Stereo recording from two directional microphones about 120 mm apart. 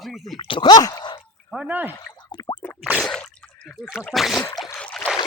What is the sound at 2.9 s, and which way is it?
Drip, 5° left (ahead or behind).